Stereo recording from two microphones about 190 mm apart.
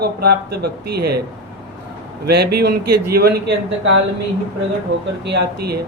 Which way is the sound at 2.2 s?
60° right (ahead or behind).